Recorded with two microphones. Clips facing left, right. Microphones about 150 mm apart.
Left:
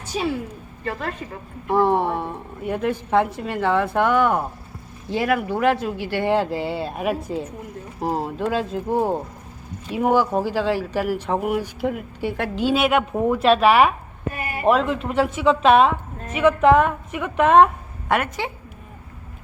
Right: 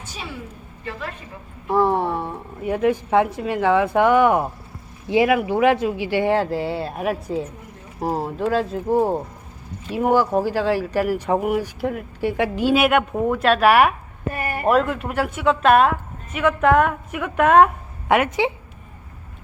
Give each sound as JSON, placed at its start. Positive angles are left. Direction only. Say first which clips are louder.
{"t": 0.0, "sound": "a sound", "louder": "left 9 dB", "side_deg": 40}
{"t": 2.2, "sound": "a woman's voice", "louder": "right 1 dB", "side_deg": -5}
{"t": 6.3, "sound": "a woman's voice", "louder": "right 1 dB", "side_deg": 0}
{"t": 14.3, "sound": "speech", "louder": "right 5 dB", "side_deg": -45}
{"t": 14.6, "sound": "a woman's voice", "louder": "even", "side_deg": 0}
{"t": 18.1, "sound": "a woman's voice", "louder": "right 4 dB", "side_deg": -15}